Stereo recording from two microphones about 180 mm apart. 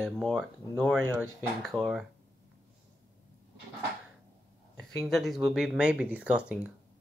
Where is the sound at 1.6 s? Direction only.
Centre (ahead or behind).